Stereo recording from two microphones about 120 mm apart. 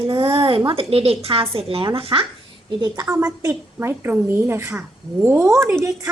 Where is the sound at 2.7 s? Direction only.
35° right (ahead or behind).